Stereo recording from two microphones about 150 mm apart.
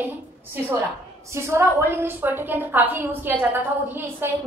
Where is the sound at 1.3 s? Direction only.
20° right (ahead or behind).